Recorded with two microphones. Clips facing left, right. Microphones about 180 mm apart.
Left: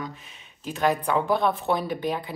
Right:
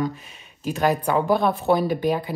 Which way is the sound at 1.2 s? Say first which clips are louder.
Right 5 dB; 5° right (ahead or behind).